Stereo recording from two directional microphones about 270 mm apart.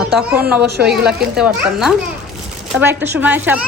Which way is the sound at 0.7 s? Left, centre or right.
Right.